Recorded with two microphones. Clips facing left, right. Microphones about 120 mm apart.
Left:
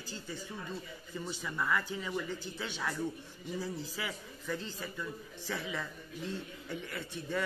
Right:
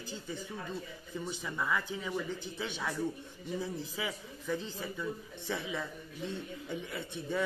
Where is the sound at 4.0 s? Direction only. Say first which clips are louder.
Right 2 dB; 10° right (ahead or behind).